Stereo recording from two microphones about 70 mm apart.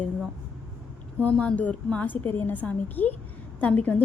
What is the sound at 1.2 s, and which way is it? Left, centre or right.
A woman's voice, centre.